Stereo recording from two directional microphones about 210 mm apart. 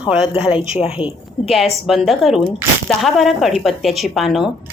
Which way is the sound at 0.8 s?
25° left (ahead or behind).